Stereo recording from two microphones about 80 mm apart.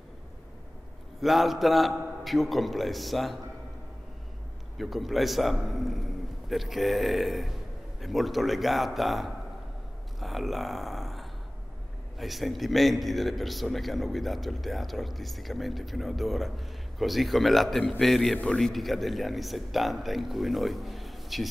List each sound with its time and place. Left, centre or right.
1.2 s a man's voice: centre
4.7 s a man's voice: centre
10.2 s a sound: centre
12.2 s a man's voice: centre